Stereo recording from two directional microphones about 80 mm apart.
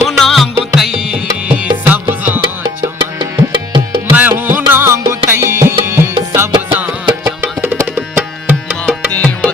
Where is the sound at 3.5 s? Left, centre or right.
Right.